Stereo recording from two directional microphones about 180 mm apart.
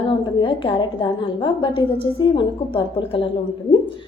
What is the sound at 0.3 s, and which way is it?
A woman's voice, 30° left (ahead or behind).